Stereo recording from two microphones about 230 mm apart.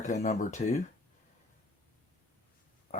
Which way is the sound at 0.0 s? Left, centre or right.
Left.